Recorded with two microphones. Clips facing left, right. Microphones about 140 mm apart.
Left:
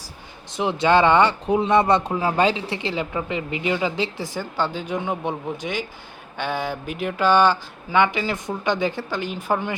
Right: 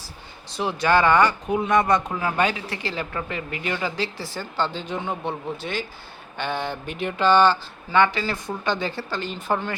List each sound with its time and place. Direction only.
0.5 s speech: 20° left (ahead or behind)